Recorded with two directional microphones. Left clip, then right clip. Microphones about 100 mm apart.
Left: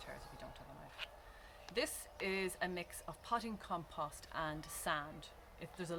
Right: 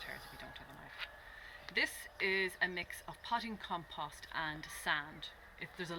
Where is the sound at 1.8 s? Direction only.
65° left (ahead or behind).